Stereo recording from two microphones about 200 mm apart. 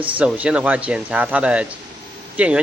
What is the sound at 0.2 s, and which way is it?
Speech, 5° right (ahead or behind).